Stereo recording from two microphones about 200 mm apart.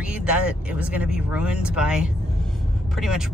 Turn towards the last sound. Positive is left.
turn(degrees=-5)  # may be behind; listen again after turning